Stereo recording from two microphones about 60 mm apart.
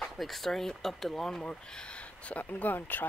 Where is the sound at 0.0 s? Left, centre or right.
Centre.